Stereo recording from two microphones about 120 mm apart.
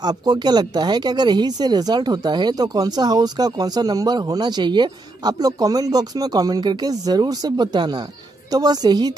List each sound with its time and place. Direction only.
0.0 s speech: 35° right (ahead or behind)